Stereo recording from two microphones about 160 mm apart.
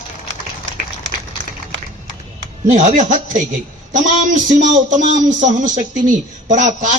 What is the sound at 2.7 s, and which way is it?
Speech, 50° right (ahead or behind).